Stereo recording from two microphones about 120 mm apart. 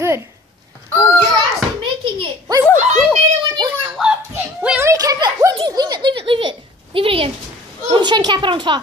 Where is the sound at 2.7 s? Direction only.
80° right.